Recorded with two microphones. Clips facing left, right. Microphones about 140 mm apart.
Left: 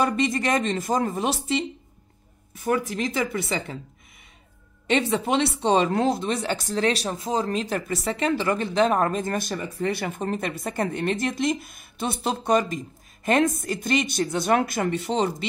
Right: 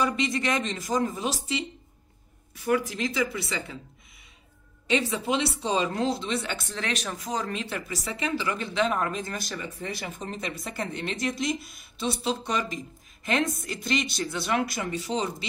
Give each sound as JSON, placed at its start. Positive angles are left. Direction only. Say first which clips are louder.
{"t": 0.0, "sound": "speech", "louder": "left 3 dB", "side_deg": 50}
{"t": 2.5, "sound": "speech", "louder": "left 1 dB", "side_deg": 45}
{"t": 4.8, "sound": "speech", "louder": "left 4 dB", "side_deg": 55}
{"t": 7.6, "sound": "speech", "louder": "left 7 dB", "side_deg": 45}